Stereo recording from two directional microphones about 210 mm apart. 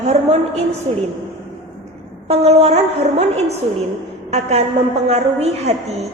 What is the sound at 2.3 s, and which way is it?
A woman's voice, 30° right (ahead or behind).